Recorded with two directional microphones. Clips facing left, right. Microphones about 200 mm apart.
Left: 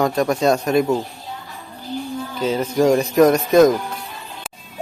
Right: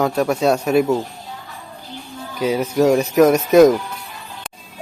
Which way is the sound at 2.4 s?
10° right (ahead or behind).